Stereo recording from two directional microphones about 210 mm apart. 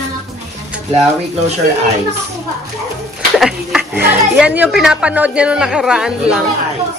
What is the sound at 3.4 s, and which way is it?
Speech, 5° right (ahead or behind).